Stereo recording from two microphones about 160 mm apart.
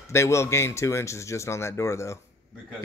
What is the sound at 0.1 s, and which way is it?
A man's voice, 15° left (ahead or behind).